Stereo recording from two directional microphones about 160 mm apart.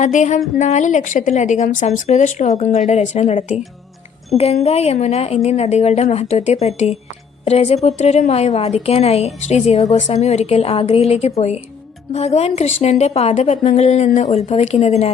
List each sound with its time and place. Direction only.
0.0 s a woman's voice: 45° left (ahead or behind)